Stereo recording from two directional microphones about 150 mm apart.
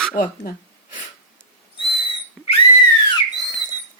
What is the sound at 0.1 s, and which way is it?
Speech, 75° left (ahead or behind).